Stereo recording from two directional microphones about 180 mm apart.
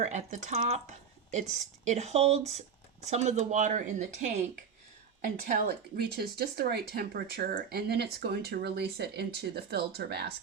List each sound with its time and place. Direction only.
0.0 s speech: 40° right (ahead or behind); by 10.3 s 65° right (ahead or behind)